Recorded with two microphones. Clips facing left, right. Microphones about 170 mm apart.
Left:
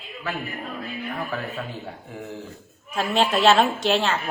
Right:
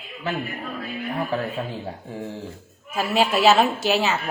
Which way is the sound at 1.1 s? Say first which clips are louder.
Right 6 dB; 30° right (ahead or behind).